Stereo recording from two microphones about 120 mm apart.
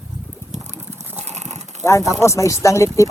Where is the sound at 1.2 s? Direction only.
70° right (ahead or behind).